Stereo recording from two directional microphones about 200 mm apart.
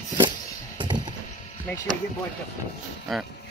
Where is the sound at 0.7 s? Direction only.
20° right (ahead or behind).